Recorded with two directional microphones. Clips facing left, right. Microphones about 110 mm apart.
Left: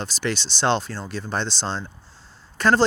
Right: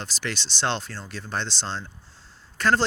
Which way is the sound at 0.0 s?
20° left (ahead or behind).